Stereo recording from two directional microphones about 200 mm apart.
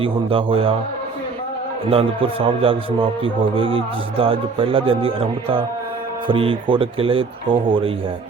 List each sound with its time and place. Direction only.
0.0 s speech: 25° right (ahead or behind)
1.9 s speech: 25° right (ahead or behind)